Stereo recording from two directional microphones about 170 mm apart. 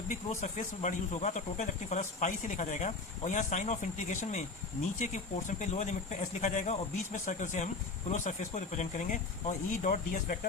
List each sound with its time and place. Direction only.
0.1 s speech: 45° left (ahead or behind)